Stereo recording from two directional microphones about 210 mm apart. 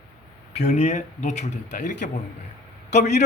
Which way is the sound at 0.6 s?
35° left (ahead or behind).